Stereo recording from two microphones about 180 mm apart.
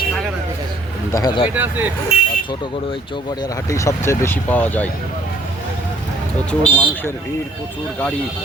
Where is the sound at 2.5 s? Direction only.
25° left (ahead or behind); by 4.9 s 10° left (ahead or behind).